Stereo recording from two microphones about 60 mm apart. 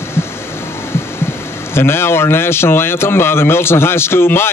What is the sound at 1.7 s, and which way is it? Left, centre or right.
Speech, left.